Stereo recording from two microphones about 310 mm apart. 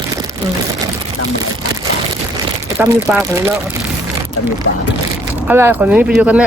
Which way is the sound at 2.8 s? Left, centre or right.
Centre.